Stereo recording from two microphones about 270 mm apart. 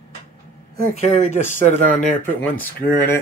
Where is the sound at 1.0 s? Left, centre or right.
Left.